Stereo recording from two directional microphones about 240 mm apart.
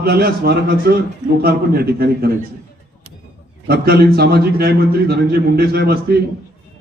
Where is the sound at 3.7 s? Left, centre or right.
Right.